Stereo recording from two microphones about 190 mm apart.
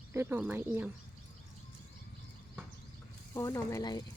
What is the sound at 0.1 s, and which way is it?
Speech, 15° right (ahead or behind).